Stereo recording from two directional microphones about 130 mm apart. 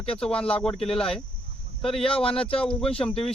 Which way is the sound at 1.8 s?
45° left (ahead or behind).